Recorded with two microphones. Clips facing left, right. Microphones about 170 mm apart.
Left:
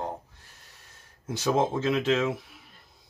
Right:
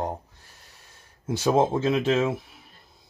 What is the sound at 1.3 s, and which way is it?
Speech, 30° right (ahead or behind).